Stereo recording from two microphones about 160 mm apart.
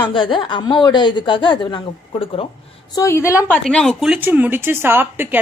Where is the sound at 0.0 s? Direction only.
30° left (ahead or behind).